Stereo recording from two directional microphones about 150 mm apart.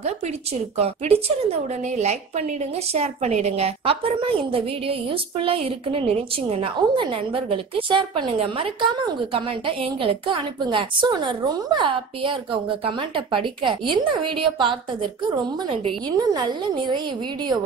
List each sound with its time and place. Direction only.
0.0 s a woman's voice: 45° right (ahead or behind)